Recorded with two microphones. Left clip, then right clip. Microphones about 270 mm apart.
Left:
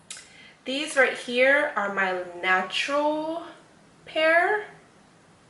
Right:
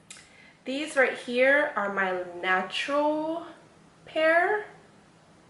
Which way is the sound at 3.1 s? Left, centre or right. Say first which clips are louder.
Left 1 dB; right.